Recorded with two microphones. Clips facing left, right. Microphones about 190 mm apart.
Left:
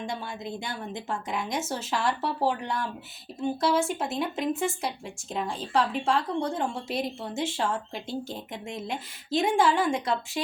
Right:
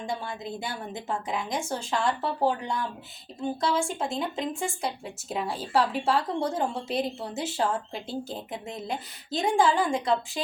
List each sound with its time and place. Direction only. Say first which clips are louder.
0.0 s speech: right 1 dB; centre (ahead or behind)